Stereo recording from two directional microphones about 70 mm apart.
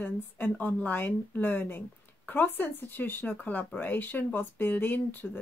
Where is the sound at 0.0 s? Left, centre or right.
Left.